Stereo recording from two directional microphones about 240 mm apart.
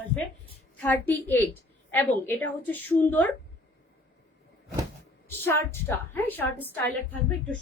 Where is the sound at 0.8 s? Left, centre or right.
Centre.